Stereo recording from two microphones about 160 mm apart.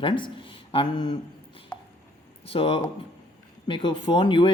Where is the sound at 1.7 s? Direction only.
5° left (ahead or behind).